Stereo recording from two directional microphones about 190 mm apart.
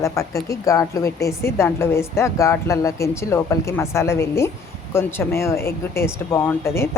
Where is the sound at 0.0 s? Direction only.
15° left (ahead or behind).